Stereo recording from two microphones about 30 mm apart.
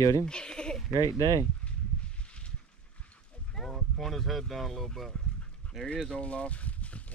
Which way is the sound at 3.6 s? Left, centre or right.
Centre.